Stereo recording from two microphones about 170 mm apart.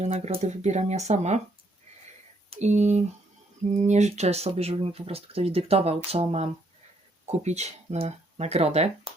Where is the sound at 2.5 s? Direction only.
45° right (ahead or behind).